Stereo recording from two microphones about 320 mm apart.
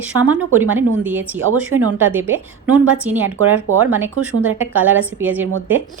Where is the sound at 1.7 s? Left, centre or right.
Right.